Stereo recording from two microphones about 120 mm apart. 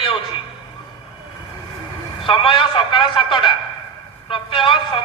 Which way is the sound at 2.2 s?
45° left (ahead or behind).